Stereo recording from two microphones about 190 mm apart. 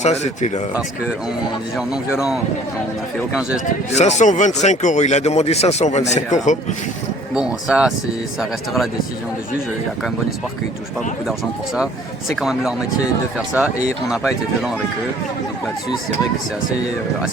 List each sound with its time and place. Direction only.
0.0 s speech: 35° left (ahead or behind)
2.1 s speech: 5° right (ahead or behind)
3.9 s speech: 40° left (ahead or behind)
7.3 s speech: 5° right (ahead or behind)
11.3 s speech: centre (ahead or behind)
14.1 s speech: 5° right (ahead or behind)